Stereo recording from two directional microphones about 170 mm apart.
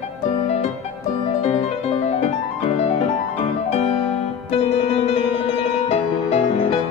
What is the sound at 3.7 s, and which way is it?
Music, 35° left (ahead or behind).